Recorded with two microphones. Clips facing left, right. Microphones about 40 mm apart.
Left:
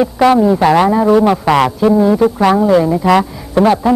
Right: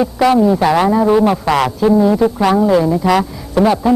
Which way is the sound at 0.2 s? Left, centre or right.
Centre.